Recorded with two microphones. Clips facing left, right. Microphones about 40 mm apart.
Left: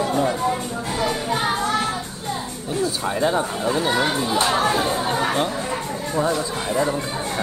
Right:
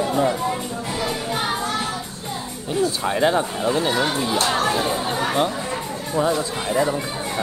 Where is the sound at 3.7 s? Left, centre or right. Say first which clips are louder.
Even; centre.